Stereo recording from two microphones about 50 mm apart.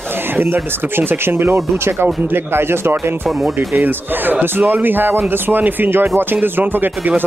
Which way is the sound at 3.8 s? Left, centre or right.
Right.